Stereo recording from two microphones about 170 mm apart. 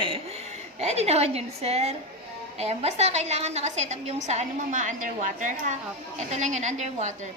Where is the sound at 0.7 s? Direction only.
40° right (ahead or behind).